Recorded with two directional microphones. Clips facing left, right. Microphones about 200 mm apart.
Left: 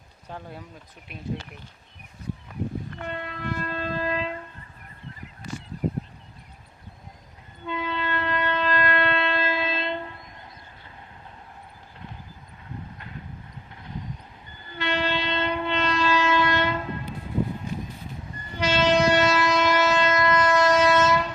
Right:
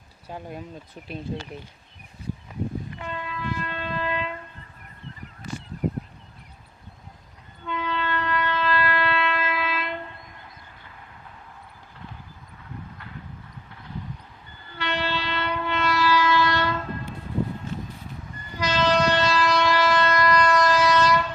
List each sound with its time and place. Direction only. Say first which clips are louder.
0.3 s speech: right 3 dB; 15° right (ahead or behind)
3.0 s train: left 1 dB; 55° left (ahead or behind); by 4.4 s 35° left (ahead or behind)
7.6 s train: right 1 dB; 15° left (ahead or behind)
14.7 s train: left 2 dB; 15° left (ahead or behind)
17.7 s a sound: left 1 dB; 15° left (ahead or behind)
18.5 s train: left 1 dB; 25° left (ahead or behind)